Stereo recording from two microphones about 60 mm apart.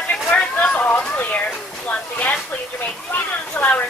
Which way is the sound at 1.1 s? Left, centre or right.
Left.